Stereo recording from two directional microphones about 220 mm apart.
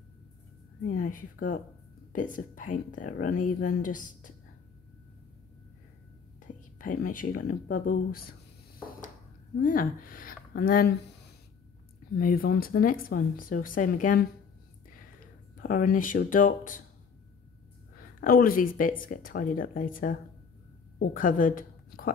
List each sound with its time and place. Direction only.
0.8 s speech: 40° left (ahead or behind)
6.4 s speech: 40° left (ahead or behind)
9.6 s speech: 40° left (ahead or behind)
12.2 s speech: 40° left (ahead or behind)
15.5 s speech: 40° left (ahead or behind)
17.9 s a woman's voice: 40° left (ahead or behind)